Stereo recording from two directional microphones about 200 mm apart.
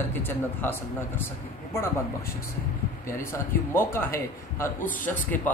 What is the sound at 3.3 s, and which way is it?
A man's voice, 10° left (ahead or behind).